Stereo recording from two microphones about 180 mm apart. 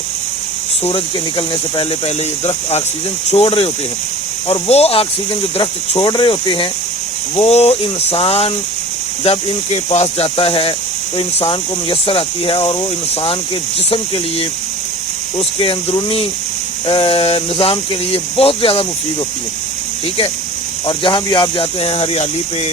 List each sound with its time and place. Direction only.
0.9 s speech: 30° left (ahead or behind)
15.4 s speech: 30° left (ahead or behind)
20.8 s speech: 25° left (ahead or behind)